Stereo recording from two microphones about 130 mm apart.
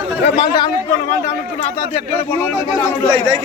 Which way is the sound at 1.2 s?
60° left (ahead or behind).